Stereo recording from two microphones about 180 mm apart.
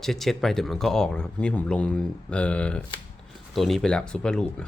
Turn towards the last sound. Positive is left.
turn(degrees=5)  # may be behind; listen again after turning